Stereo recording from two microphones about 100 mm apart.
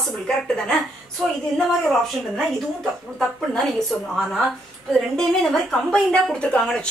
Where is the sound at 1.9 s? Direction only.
5° left (ahead or behind).